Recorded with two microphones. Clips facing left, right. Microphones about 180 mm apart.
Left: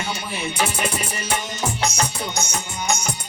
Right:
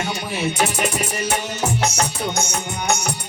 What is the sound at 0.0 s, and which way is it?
Music, 60° right (ahead or behind).